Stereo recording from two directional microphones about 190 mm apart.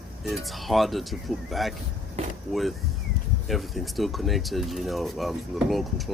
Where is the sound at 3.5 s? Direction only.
Centre (ahead or behind).